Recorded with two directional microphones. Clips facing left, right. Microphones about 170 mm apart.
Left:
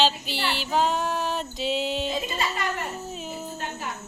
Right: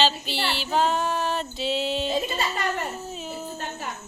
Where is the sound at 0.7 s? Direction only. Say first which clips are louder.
Right 1 dB; 10° left (ahead or behind).